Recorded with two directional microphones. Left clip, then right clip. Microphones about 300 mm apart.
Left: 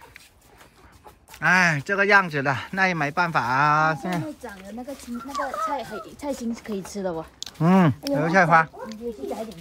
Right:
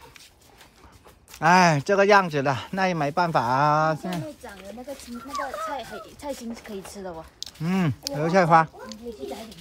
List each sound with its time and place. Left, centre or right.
1.4 s speech: centre
5.7 s speech: left
7.3 s speech: centre